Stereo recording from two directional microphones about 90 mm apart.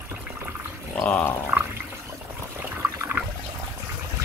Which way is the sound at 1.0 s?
15° left (ahead or behind).